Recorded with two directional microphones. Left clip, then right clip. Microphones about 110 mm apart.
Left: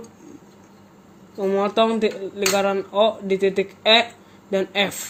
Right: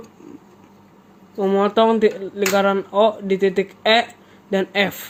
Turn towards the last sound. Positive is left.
turn(degrees=-55)  # may be behind; listen again after turning